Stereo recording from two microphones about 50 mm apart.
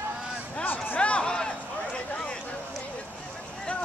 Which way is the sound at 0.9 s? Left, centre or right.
Left.